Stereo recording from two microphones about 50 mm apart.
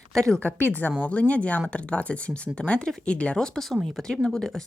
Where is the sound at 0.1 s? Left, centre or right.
Centre.